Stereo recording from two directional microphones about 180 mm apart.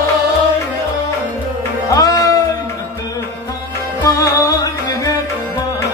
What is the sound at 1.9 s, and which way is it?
Music, 20° left (ahead or behind).